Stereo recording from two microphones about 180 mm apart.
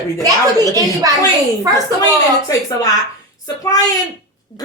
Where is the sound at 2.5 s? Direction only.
20° left (ahead or behind).